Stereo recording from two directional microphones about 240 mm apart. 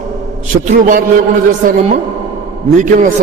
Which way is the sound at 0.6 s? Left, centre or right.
Right.